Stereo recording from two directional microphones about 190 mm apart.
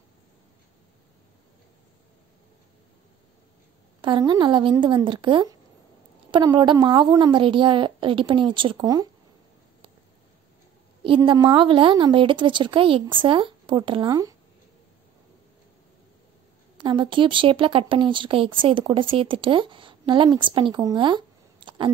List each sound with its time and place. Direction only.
4.0 s speech: 25° right (ahead or behind)
11.1 s speech: 25° right (ahead or behind)
16.7 s speech: 25° right (ahead or behind)